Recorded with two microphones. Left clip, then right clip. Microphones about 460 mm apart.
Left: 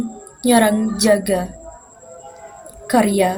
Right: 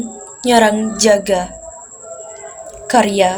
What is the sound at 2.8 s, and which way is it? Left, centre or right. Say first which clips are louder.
Speech: right 4 dB; left.